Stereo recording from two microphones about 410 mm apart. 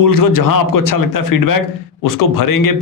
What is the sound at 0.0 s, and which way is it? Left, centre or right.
A man's voice, left.